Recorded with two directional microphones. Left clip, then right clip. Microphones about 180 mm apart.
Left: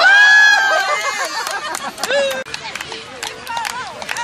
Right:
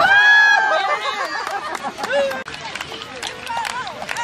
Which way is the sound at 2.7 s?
40° right (ahead or behind).